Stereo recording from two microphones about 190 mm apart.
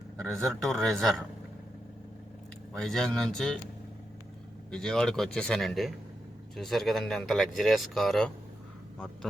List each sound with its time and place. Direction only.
0.2 s speech: centre (ahead or behind)
2.7 s speech: 5° left (ahead or behind)
4.7 s speech: 5° left (ahead or behind)